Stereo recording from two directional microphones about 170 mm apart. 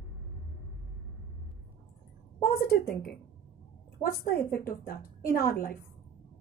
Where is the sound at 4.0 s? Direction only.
60° left (ahead or behind).